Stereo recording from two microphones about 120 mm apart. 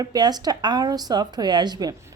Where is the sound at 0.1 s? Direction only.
35° right (ahead or behind).